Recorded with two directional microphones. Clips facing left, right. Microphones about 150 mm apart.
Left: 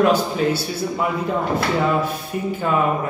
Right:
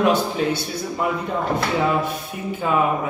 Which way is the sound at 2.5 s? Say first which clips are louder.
Even; centre (ahead or behind).